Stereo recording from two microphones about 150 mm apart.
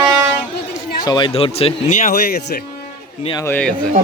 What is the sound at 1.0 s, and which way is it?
Speech, 30° left (ahead or behind).